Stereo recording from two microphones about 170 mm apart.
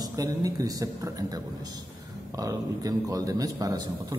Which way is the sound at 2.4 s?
20° right (ahead or behind).